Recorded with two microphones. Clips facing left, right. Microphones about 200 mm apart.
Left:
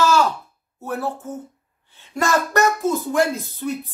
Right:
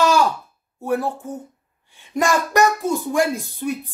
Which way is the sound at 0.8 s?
15° right (ahead or behind).